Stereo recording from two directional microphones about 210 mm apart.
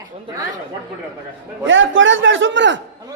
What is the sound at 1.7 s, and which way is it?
Speech, 65° right (ahead or behind).